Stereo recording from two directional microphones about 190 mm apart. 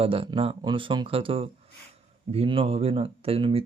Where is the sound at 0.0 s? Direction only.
30° right (ahead or behind).